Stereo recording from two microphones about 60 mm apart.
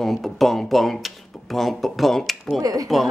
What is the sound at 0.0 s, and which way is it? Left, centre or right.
Speech, centre.